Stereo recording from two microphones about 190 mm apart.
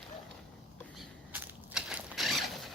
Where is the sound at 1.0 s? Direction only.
5° right (ahead or behind).